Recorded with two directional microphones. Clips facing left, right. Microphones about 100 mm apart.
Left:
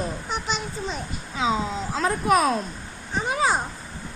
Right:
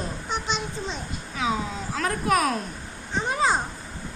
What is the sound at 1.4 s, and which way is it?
A woman's voice, 25° left (ahead or behind).